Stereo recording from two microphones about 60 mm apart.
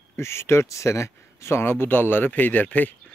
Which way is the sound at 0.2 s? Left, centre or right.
Left.